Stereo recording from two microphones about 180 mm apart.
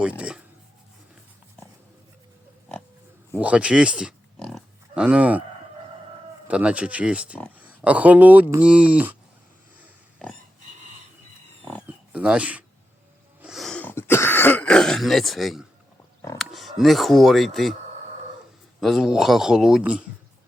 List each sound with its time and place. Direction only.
0.0 s speech: 5° right (ahead or behind)
3.4 s pig: 5° right (ahead or behind)
6.5 s speech: 5° right (ahead or behind)
12.1 s speech: 5° right (ahead or behind)
13.4 s throat clearing: centre (ahead or behind)
16.4 s speech: centre (ahead or behind)
18.8 s a man's voice: centre (ahead or behind)